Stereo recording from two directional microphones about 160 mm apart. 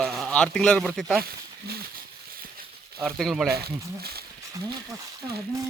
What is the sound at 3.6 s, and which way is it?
Speech, 80° right.